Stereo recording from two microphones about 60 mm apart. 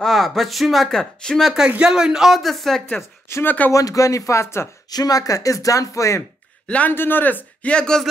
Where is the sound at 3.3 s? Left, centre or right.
Left.